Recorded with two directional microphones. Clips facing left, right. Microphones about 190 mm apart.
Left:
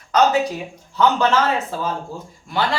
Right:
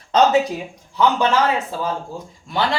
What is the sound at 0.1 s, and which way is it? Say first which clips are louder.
Speech: right 1 dB; 25° right (ahead or behind).